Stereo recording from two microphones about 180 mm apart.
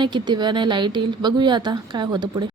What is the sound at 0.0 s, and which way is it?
A woman's voice, 25° right (ahead or behind).